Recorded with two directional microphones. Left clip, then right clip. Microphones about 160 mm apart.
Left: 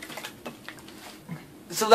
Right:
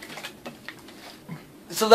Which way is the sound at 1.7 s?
20° right (ahead or behind).